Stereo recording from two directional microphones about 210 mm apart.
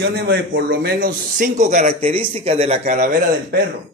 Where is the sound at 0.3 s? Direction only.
50° right (ahead or behind); by 3.2 s 35° right (ahead or behind).